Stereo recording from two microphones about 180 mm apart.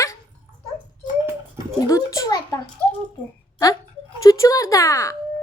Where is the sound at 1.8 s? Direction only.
20° left (ahead or behind).